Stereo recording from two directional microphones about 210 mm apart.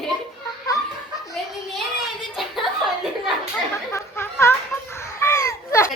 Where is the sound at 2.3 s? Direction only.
Centre (ahead or behind).